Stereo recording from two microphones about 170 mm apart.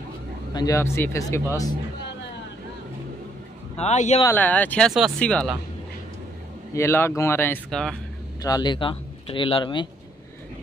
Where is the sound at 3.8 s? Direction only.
40° left (ahead or behind).